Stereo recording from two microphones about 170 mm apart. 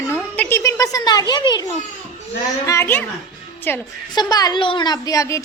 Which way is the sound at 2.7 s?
15° left (ahead or behind).